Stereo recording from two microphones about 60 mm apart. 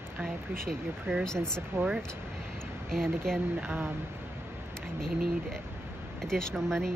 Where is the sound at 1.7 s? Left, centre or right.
Right.